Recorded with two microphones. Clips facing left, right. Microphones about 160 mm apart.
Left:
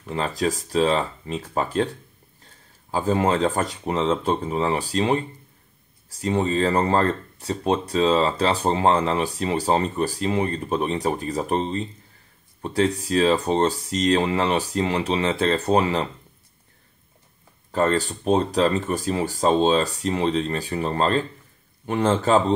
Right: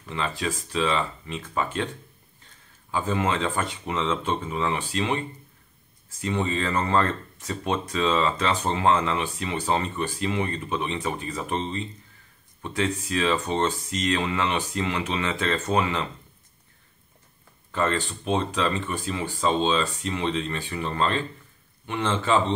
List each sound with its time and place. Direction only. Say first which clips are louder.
0.1 s speech: left 5 dB; 40° left (ahead or behind)
2.9 s speech: left 5 dB; 35° left (ahead or behind)
17.6 s speech: left 5 dB; 40° left (ahead or behind)